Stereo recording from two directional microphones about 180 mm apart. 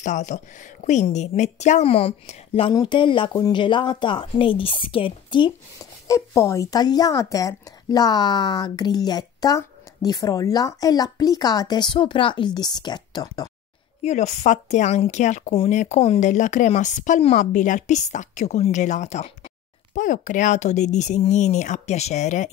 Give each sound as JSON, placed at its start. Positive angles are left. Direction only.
{"t": 0.0, "sound": "speech", "side_deg": 40}
{"t": 6.0, "sound": "speech", "side_deg": 15}
{"t": 14.0, "sound": "speech", "side_deg": 40}